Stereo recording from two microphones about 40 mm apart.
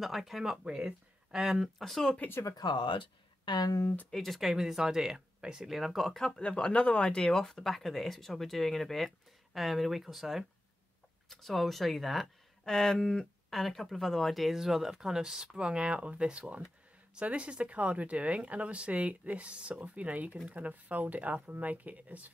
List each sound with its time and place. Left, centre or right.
0.0 s speech: centre
0.7 s speech: centre
1.8 s speech: centre
3.8 s speech: left
4.1 s speech: centre
4.4 s speech: centre
6.3 s speech: left
7.2 s speech: centre
13.5 s speech: centre
15.5 s speech: right